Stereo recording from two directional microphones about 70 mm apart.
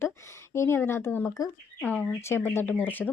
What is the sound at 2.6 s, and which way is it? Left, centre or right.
Speech, left.